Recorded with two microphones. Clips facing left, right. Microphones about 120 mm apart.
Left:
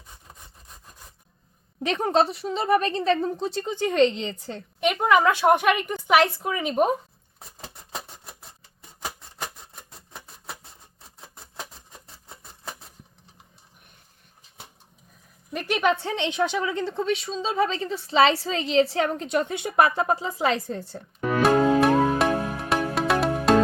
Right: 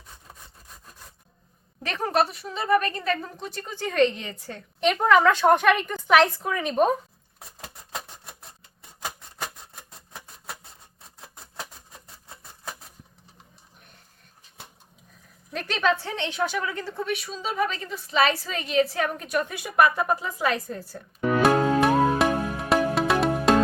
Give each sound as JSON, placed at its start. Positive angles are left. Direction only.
{"t": 1.8, "sound": "a woman's voice", "side_deg": 20}
{"t": 4.8, "sound": "a woman's voice", "side_deg": 10}
{"t": 7.6, "sound": "a sound", "side_deg": 0}
{"t": 15.5, "sound": "a woman's voice", "side_deg": 15}
{"t": 21.4, "sound": "music", "side_deg": 0}